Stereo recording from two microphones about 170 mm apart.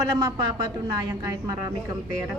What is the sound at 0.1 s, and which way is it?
Speech, 20° right (ahead or behind).